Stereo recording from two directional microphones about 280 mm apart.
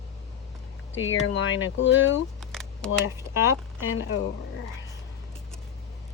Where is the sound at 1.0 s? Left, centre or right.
Left.